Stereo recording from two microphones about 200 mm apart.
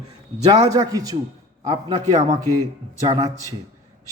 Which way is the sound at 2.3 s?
20° right (ahead or behind).